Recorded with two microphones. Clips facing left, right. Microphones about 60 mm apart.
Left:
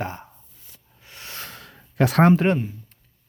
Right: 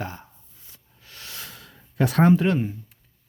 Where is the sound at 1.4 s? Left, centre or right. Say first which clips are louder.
Left 3 dB; left.